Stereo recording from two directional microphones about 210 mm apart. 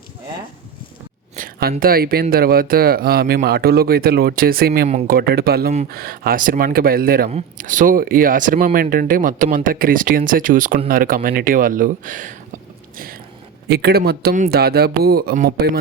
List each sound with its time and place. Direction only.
1.4 s a sound: 45° right (ahead or behind)
1.8 s speech: 45° right (ahead or behind)
4.9 s speech: 30° right (ahead or behind)
5.1 s speech: 50° right (ahead or behind)
7.3 s speech: 35° right (ahead or behind)
13.7 s speech: 50° right (ahead or behind)